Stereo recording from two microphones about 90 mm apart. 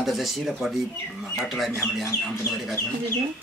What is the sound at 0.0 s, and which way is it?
Speech, centre (ahead or behind).